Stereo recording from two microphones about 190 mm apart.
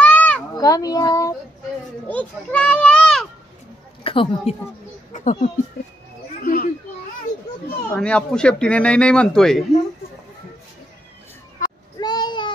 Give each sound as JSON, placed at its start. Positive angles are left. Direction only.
{"t": 0.0, "sound": "children playing", "side_deg": 5}
{"t": 0.6, "sound": "a child's voice", "side_deg": 20}
{"t": 2.0, "sound": "a child's voice", "side_deg": 5}
{"t": 4.0, "sound": "a woman's voice", "side_deg": 30}
{"t": 5.1, "sound": "speech", "side_deg": 40}
{"t": 7.9, "sound": "speech", "side_deg": 5}
{"t": 12.0, "sound": "a sound", "side_deg": 20}